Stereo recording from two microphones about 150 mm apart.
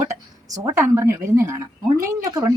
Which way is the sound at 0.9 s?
20° right (ahead or behind).